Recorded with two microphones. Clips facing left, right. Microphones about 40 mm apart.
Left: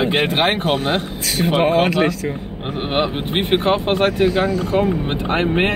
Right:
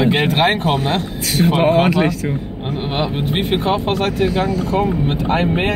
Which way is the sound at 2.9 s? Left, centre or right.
Left.